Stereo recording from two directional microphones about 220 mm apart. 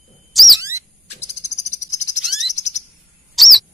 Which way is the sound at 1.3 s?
30° left (ahead or behind).